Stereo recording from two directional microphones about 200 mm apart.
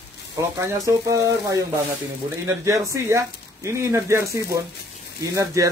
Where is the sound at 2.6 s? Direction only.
15° right (ahead or behind).